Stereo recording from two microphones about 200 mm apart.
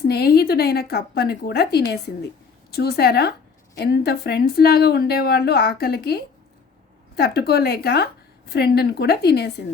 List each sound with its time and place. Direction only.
0.0 s speech: 50° left (ahead or behind)